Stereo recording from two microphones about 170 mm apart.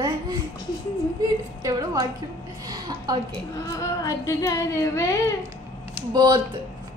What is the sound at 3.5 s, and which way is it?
Speech, 20° left (ahead or behind).